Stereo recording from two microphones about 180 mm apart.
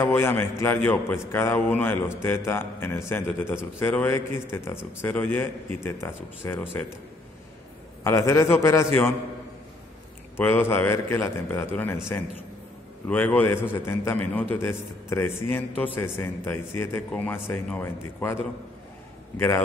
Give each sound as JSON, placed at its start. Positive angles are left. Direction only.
{"t": 0.0, "sound": "a man's voice", "side_deg": 15}
{"t": 8.0, "sound": "a man's voice", "side_deg": 15}
{"t": 10.3, "sound": "a man's voice", "side_deg": 10}
{"t": 13.1, "sound": "a man's voice", "side_deg": 10}